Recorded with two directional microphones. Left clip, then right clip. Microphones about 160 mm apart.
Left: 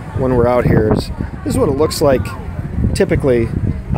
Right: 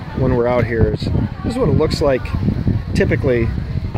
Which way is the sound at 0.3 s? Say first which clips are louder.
Left 4 dB; 10° left (ahead or behind).